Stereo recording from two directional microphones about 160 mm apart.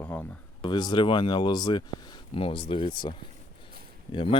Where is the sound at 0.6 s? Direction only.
30° left (ahead or behind).